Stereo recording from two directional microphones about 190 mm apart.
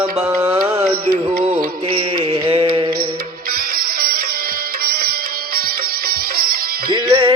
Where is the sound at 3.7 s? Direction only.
50° right (ahead or behind).